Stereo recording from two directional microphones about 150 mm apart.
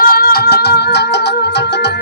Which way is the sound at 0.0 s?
80° left.